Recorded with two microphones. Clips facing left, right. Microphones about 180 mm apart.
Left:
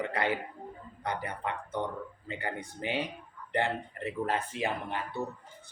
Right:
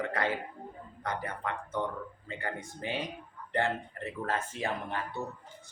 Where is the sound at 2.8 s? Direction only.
20° left (ahead or behind).